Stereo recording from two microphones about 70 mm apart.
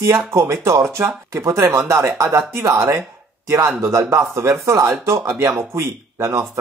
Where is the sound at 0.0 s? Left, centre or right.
Right.